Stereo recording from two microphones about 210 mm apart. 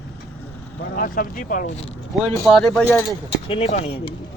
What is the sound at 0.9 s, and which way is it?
Speech, 40° left (ahead or behind).